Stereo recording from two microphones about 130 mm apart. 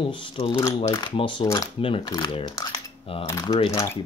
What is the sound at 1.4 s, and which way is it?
Speech, 25° left (ahead or behind).